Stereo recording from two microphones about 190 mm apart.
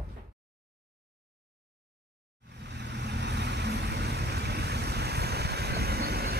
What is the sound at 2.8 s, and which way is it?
Vehicle, 65° right (ahead or behind).